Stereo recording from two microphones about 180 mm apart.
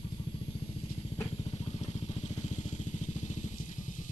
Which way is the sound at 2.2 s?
40° left (ahead or behind).